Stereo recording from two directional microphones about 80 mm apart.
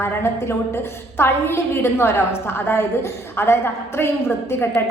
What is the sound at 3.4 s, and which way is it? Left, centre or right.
A woman's voice, left.